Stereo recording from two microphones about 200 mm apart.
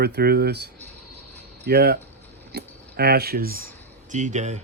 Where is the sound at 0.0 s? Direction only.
50° right (ahead or behind).